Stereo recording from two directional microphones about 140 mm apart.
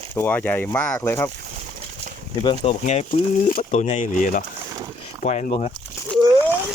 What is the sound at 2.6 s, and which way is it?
Speech, 55° left (ahead or behind).